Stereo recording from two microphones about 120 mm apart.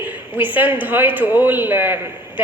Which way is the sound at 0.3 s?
15° right (ahead or behind).